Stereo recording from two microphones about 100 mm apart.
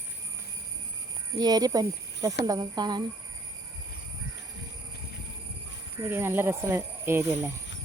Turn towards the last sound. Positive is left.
turn(degrees=-25)  # may be behind; listen again after turning